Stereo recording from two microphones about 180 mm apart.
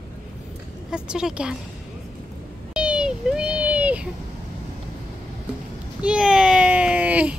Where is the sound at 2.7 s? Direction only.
5° right (ahead or behind).